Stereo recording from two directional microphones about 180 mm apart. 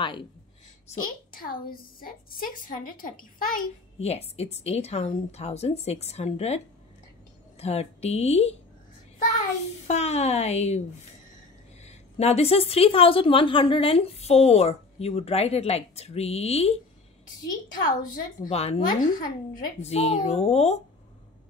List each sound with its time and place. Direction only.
0.0 s speech: 25° left (ahead or behind)
0.8 s a woman's voice: 50° left (ahead or behind)
4.0 s a woman's voice: 35° left (ahead or behind)
9.8 s a woman's voice: 35° left (ahead or behind)
11.8 s a woman's voice: 35° left (ahead or behind)
17.8 s a woman's voice: 50° left (ahead or behind)
18.5 s a woman's voice: 35° left (ahead or behind)
18.9 s a woman's voice: 50° left (ahead or behind)
19.8 s a woman's voice: 35° left (ahead or behind)